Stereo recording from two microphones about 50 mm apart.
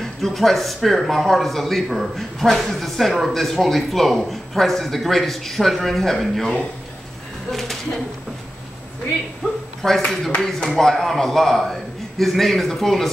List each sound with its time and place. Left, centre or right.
0.0 s speech: centre
7.5 s speech: centre
9.4 s speech: centre